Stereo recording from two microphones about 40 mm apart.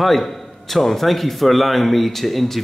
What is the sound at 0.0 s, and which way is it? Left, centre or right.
A man's voice, centre.